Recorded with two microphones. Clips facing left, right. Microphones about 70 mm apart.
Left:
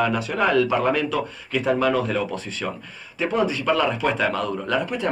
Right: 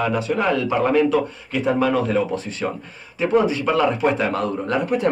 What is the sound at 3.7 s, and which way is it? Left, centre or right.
A man's voice, centre.